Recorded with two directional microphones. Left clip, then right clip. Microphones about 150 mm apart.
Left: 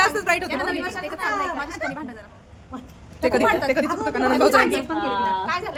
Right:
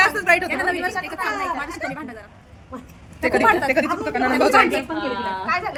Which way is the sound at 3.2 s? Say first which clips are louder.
Right 2 dB; 20° left (ahead or behind).